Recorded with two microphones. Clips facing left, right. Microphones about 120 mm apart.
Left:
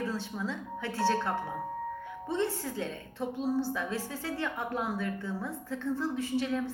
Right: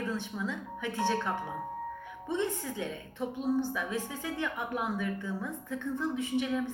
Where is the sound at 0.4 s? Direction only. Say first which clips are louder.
Even; 15° right (ahead or behind).